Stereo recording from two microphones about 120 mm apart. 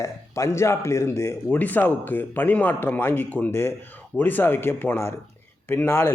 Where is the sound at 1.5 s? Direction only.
15° left (ahead or behind).